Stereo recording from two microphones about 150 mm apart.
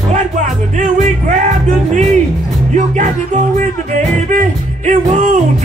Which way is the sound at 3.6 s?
50° right (ahead or behind).